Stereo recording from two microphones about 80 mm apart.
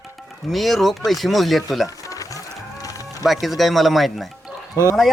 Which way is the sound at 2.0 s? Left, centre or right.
Left.